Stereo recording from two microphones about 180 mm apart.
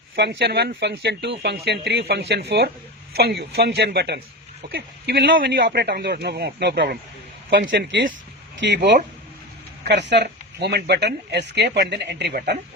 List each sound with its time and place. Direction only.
0.2 s speech: 65° right (ahead or behind)
7.7 s speech: 90° right
8.5 s speech: 75° right (ahead or behind)